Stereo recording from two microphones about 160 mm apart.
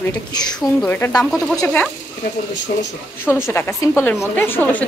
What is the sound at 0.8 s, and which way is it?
Speech, 15° left (ahead or behind).